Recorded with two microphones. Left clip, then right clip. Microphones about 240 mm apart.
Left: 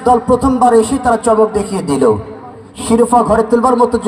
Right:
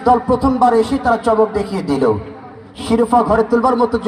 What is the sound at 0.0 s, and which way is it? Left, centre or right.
A man's voice, left.